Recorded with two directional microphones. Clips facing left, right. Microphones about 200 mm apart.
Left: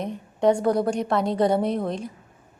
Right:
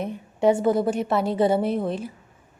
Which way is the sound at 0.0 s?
5° right (ahead or behind).